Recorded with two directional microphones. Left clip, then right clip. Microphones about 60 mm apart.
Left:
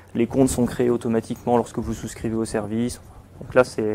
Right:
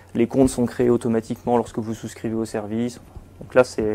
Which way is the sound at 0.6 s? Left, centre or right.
Left.